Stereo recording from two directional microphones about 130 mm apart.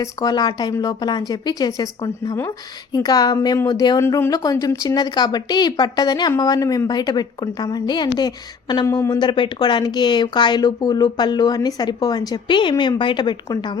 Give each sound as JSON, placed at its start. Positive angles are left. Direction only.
{"t": 0.0, "sound": "a woman's voice", "side_deg": 30}
{"t": 4.0, "sound": "a woman's voice", "side_deg": 20}
{"t": 8.9, "sound": "speech", "side_deg": 20}
{"t": 9.1, "sound": "a woman's voice", "side_deg": 40}